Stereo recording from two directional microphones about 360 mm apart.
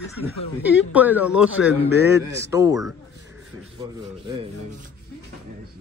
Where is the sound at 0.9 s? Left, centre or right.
Centre.